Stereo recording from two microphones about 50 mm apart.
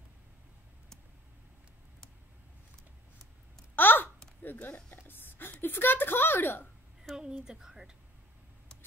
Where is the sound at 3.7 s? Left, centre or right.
Left.